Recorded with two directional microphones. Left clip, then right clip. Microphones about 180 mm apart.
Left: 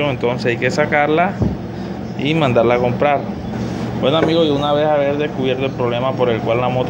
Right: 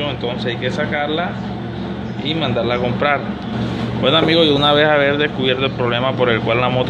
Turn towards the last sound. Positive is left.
turn(degrees=0)  # may be behind; listen again after turning